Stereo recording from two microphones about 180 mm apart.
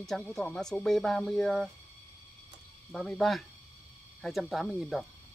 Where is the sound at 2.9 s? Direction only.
Centre (ahead or behind).